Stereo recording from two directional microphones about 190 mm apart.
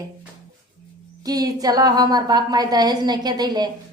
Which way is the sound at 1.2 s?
20° right (ahead or behind).